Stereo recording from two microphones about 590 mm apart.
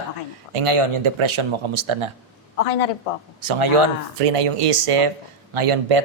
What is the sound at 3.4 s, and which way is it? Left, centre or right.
Speech, right.